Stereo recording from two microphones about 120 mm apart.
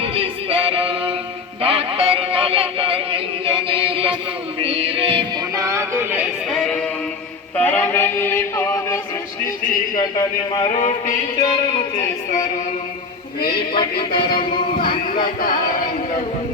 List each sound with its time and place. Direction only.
0.0 s music: 50° right (ahead or behind)
1.6 s synthetic singing: 55° right (ahead or behind)
4.6 s music: 55° right (ahead or behind)
5.5 s a sound: 25° right (ahead or behind)
6.5 s music: 5° left (ahead or behind)
7.5 s a sound: 15° left (ahead or behind)
9.9 s speech: 35° left (ahead or behind)
10.7 s music: 90° left
11.9 s music: 90° left
13.7 s music: 45° left (ahead or behind)